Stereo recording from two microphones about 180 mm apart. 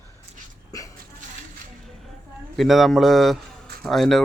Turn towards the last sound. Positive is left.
turn(degrees=0)  # may be behind; listen again after turning